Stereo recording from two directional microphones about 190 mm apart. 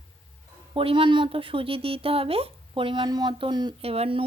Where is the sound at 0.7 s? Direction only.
30° right (ahead or behind).